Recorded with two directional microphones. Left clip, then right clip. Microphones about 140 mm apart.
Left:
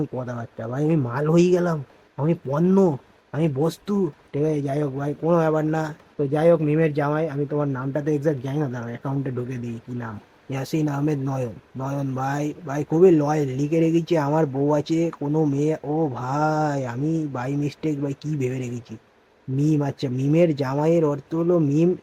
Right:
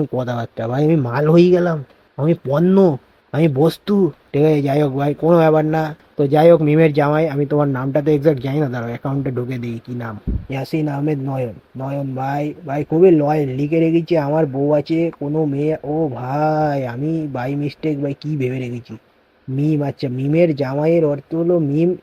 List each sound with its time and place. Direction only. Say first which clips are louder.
0.2 s speech: right 9 dB; 35° right (ahead or behind)
6.3 s speech: right 7 dB; 45° right (ahead or behind); by 10.1 s 20° right (ahead or behind)
10.5 s speech: right 3 dB; 10° right (ahead or behind)